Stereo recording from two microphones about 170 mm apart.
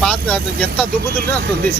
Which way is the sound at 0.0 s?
5° left (ahead or behind).